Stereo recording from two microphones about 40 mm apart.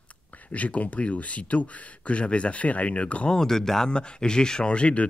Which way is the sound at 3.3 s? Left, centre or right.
Centre.